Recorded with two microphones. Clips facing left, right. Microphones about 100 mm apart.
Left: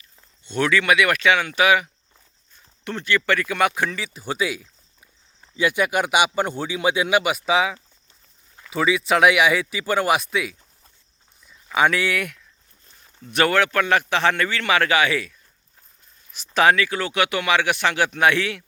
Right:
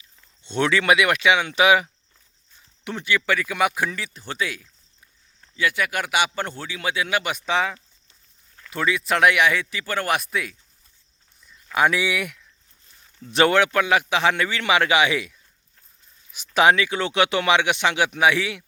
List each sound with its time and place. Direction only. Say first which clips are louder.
0.4 s speech: even; 25° right (ahead or behind)
2.8 s a man's voice: left 1 dB; 10° right (ahead or behind); by 10.2 s 10° left (ahead or behind)
10.2 s speech: left 3 dB; centre (ahead or behind)
13.3 s speech: right 1 dB; 20° right (ahead or behind)